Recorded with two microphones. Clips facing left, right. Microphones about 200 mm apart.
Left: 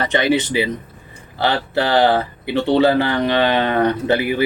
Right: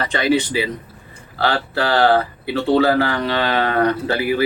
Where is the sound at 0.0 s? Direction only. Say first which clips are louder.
Left 1 dB; 20° left (ahead or behind).